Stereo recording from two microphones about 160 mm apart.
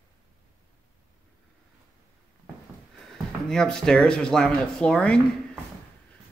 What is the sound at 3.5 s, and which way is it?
Speech, 5° left (ahead or behind).